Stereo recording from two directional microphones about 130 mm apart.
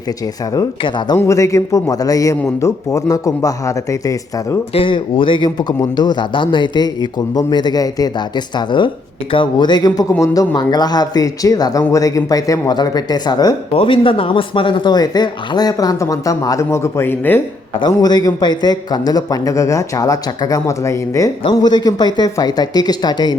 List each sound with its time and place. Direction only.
0.8 s speech: 35° left (ahead or behind)
1.1 s a man's voice: 20° left (ahead or behind)
4.7 s speech: 40° left (ahead or behind)
13.7 s speech: 40° left (ahead or behind); by 17.4 s 15° left (ahead or behind)
17.7 s a man's voice: 30° left (ahead or behind)
21.4 s speech: 35° left (ahead or behind)